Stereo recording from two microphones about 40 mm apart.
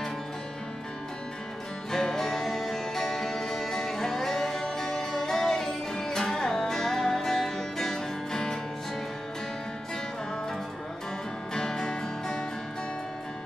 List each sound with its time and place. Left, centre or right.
1.9 s music: centre
11.5 s music: centre